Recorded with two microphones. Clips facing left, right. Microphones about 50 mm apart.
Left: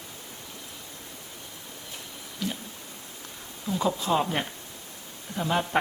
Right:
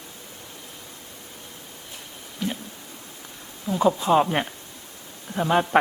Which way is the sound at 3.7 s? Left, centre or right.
Right.